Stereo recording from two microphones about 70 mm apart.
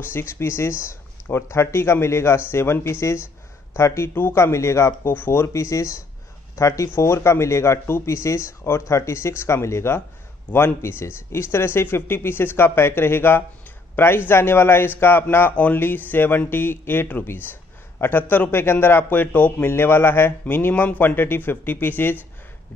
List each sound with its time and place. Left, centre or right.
0.0 s speech: left
5.5 s speech: left